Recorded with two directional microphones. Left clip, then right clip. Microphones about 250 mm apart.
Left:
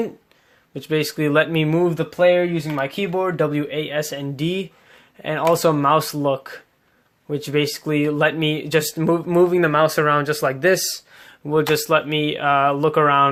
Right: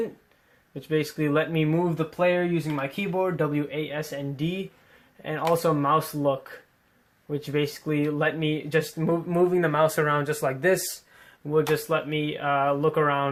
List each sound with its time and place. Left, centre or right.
0.7 s speech: left
11.7 s speech: left